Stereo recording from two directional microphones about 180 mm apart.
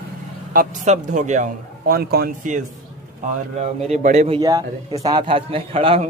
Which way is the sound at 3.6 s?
40° right (ahead or behind).